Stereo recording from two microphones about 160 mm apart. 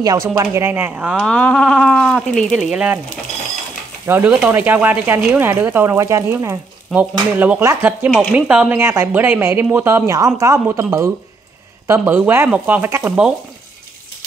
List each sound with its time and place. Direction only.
0.0 s speech: 20° right (ahead or behind)
4.0 s speech: 10° right (ahead or behind)
8.1 s speech: 5° left (ahead or behind)
8.5 s speech: 10° right (ahead or behind)